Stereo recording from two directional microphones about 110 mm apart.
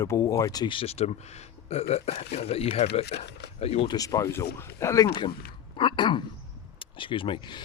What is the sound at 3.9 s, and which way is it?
Speech, 30° left (ahead or behind).